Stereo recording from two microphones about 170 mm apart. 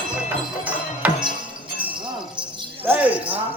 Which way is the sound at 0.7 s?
10° right (ahead or behind).